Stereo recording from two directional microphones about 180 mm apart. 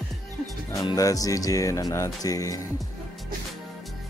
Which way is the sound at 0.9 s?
20° left (ahead or behind).